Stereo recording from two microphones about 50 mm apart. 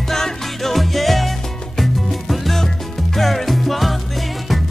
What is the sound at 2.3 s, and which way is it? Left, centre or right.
Music, centre.